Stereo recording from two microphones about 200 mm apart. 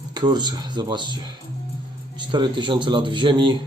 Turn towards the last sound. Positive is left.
turn(degrees=-25)  # may be behind; listen again after turning